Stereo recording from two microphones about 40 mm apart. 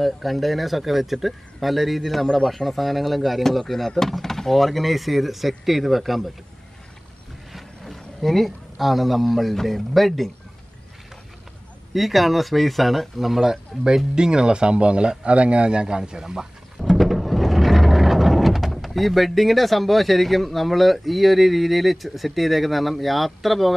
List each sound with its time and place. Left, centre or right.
0.0 s speech: centre
7.5 s speech: centre
11.9 s speech: centre
16.8 s vehicle: centre